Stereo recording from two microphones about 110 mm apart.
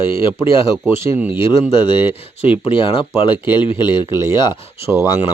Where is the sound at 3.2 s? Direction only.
45° left (ahead or behind).